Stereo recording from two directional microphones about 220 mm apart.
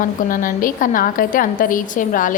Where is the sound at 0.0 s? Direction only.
40° left (ahead or behind).